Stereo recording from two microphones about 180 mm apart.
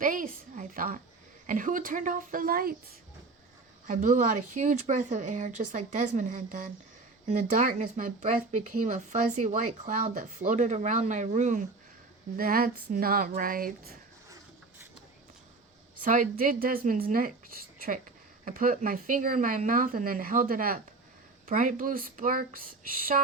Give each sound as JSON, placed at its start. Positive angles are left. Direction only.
{"t": 0.0, "sound": "speech", "side_deg": -50}
{"t": 3.8, "sound": "speech", "side_deg": -45}
{"t": 12.4, "sound": "speech", "side_deg": -55}
{"t": 16.0, "sound": "speech", "side_deg": -50}